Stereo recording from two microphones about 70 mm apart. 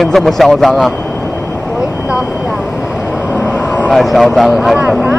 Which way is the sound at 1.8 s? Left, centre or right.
Centre.